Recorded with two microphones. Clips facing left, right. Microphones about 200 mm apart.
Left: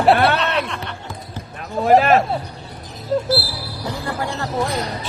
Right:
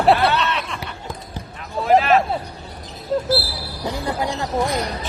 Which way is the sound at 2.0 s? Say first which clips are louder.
Left 1 dB; 45° left (ahead or behind).